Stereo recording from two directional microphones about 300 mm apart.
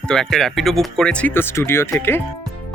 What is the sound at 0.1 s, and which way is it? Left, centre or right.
Speech, centre.